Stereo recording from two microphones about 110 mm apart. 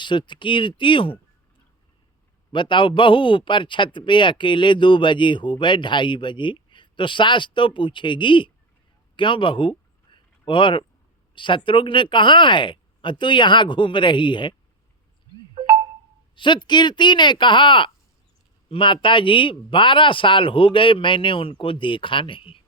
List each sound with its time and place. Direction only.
0.0 s a man's voice: 45° left (ahead or behind)
2.5 s a man's voice: 45° left (ahead or behind)
9.1 s a sound: 50° left (ahead or behind)
11.3 s a man's voice: 50° left (ahead or behind)
15.5 s chime: 35° right (ahead or behind)
16.3 s a man's voice: 45° left (ahead or behind)